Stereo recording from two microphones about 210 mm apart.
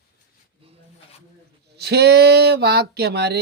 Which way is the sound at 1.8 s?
50° right (ahead or behind).